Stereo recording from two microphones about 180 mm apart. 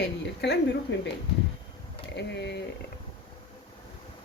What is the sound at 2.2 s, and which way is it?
Speech, 75° left (ahead or behind).